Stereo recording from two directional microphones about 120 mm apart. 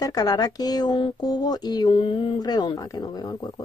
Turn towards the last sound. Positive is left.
turn(degrees=35)  # may be behind; listen again after turning